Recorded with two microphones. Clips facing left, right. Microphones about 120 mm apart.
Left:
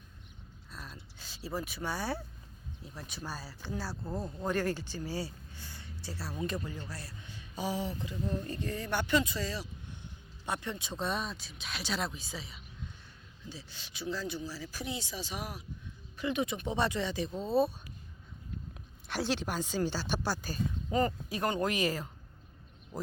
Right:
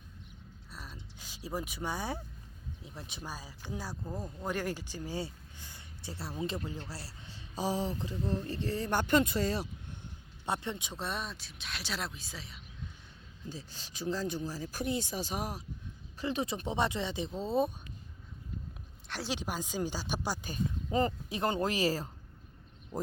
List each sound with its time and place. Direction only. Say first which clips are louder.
0.7 s a sound: left 1 dB; 10° right (ahead or behind)
1.2 s speech: even; 15° right (ahead or behind); by 10.0 s 55° right (ahead or behind)
10.4 s speech: right 2 dB; 25° right (ahead or behind)
10.9 s speech: left 3 dB; centre (ahead or behind)
13.5 s speech: right 3 dB; 40° right (ahead or behind)
16.7 s speech: left 1 dB; 20° right (ahead or behind)
19.0 s a sound: left 6 dB; 5° left (ahead or behind)
19.3 s speech: left 1 dB; 10° right (ahead or behind); by 22.1 s 30° right (ahead or behind)